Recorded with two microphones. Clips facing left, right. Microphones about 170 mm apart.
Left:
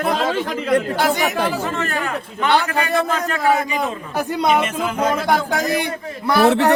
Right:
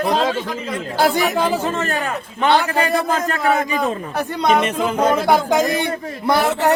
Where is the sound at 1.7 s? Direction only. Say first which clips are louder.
Right 2 dB; 30° right (ahead or behind).